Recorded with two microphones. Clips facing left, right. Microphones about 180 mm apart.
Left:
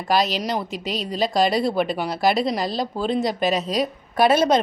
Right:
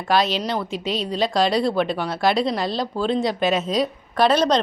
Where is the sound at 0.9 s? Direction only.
Centre (ahead or behind).